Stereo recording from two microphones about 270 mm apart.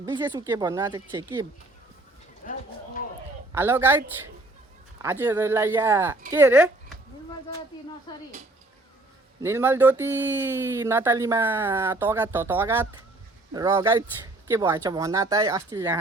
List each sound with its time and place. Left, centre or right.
0.0 s speech: centre
2.4 s a sound: left
3.5 s speech: centre
5.0 s speech: centre
8.1 s speech: centre
9.4 s speech: centre